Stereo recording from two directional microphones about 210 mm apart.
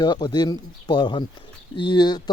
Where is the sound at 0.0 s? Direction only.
20° left (ahead or behind).